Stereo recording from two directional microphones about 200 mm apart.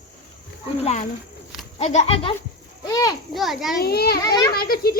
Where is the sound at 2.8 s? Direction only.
20° left (ahead or behind).